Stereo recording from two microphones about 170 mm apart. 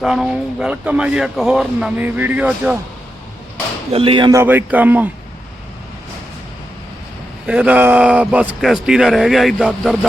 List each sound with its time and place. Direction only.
0.0 s a man's voice: 5° right (ahead or behind)
3.9 s speech: 30° right (ahead or behind)
4.3 s a man's voice: 15° right (ahead or behind)
7.4 s a man's voice: 10° right (ahead or behind)